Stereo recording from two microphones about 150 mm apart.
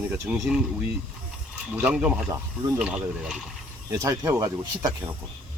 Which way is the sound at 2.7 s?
5° right (ahead or behind).